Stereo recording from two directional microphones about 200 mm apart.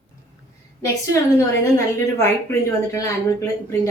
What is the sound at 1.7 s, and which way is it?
A woman's voice, 15° left (ahead or behind).